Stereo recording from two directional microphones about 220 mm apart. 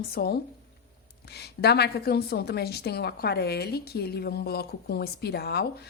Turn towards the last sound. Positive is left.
turn(degrees=45)  # may be behind; listen again after turning